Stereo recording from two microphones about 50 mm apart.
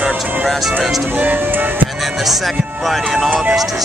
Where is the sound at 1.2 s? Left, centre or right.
Right.